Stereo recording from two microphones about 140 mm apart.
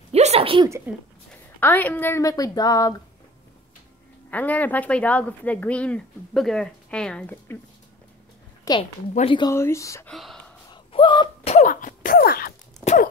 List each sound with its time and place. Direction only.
0.1 s a sound: 50° right (ahead or behind)
0.9 s speech: 10° right (ahead or behind)
1.6 s a woman's voice: 15° left (ahead or behind)
4.3 s speech: 10° left (ahead or behind)
8.7 s a woman's voice: 25° left (ahead or behind)
9.2 s speech: 35° left (ahead or behind)
9.5 s a woman's voice: 20° left (ahead or behind)
10.0 s speech: centre (ahead or behind)
10.7 s a sound: 35° left (ahead or behind)
11.5 s cough: 70° left (ahead or behind); by 12.5 s 90° left
12.8 s a sound: 60° left (ahead or behind)